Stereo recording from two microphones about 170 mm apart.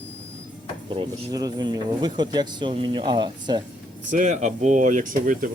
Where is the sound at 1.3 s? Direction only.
20° right (ahead or behind).